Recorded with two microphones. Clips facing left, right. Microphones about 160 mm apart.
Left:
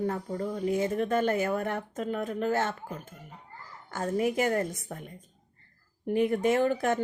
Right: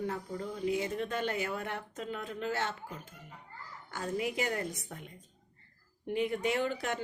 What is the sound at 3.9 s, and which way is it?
Speech, 45° left (ahead or behind).